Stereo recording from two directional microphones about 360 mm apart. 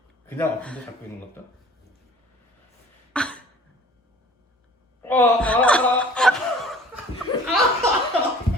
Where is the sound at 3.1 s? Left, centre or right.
Centre.